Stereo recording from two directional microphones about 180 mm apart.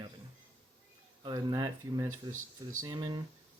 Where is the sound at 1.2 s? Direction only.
20° right (ahead or behind).